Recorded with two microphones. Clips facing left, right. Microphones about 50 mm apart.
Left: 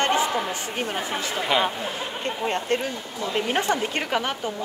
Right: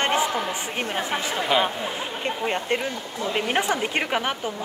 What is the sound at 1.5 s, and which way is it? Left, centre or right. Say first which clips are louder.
Speech: right 1 dB; centre.